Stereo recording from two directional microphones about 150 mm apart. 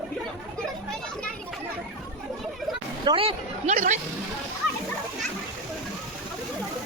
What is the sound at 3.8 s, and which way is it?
Speech, 55° right (ahead or behind).